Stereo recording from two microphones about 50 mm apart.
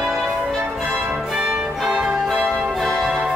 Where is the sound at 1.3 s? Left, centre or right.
Right.